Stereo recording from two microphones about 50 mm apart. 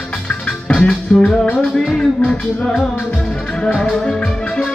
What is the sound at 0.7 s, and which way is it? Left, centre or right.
Music, centre.